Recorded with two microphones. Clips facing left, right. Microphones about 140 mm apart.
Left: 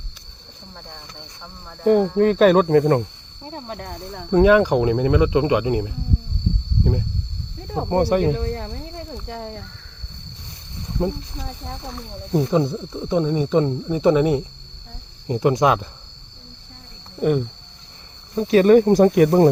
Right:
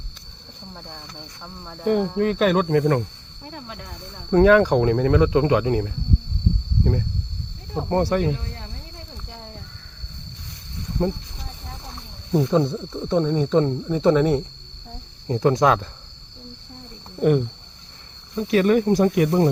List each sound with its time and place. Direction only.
2.1 s speech: 35° left (ahead or behind)
3.7 s speech: 50° left (ahead or behind)
4.3 s speech: 5° left (ahead or behind)
7.9 s speech: 10° left (ahead or behind)
8.3 s cricket: 60° left (ahead or behind)
11.0 s speech: 10° left (ahead or behind)
12.3 s speech: 5° left (ahead or behind)
17.2 s speech: centre (ahead or behind)
18.3 s speech: 35° left (ahead or behind)